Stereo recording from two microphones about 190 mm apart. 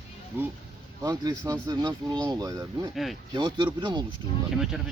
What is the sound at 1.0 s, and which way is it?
Speech, 20° right (ahead or behind).